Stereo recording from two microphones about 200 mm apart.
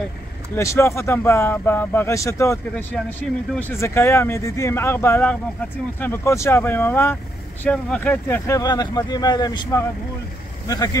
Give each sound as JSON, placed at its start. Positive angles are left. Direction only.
{"t": 0.6, "sound": "speech", "side_deg": 15}